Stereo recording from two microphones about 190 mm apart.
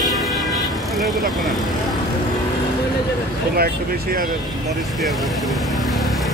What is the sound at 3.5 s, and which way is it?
Vehicle, 50° right (ahead or behind).